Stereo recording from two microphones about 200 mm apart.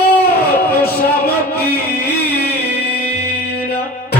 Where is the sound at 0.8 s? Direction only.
50° left (ahead or behind).